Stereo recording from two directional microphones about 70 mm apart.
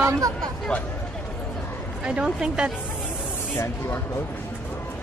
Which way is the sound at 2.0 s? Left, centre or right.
Centre.